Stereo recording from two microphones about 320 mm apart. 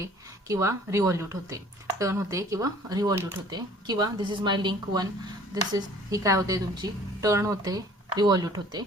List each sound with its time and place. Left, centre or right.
0.0 s a woman's voice: centre